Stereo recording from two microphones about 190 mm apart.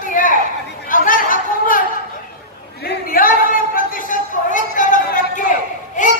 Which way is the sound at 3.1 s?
50° left (ahead or behind).